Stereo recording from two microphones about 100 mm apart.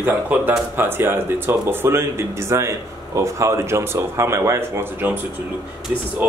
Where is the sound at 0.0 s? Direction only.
20° right (ahead or behind).